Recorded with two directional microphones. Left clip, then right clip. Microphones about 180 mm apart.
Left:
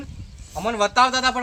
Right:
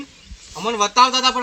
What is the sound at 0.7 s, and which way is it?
Speech, 45° left (ahead or behind).